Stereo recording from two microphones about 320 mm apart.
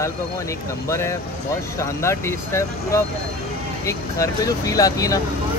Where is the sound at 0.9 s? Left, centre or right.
Centre.